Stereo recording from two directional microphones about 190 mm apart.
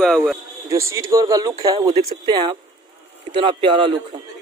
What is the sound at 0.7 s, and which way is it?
Speech, 15° right (ahead or behind).